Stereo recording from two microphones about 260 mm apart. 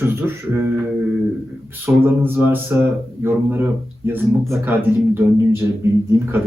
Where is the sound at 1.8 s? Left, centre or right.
Centre.